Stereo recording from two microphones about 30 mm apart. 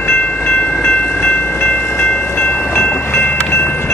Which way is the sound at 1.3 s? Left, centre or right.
Left.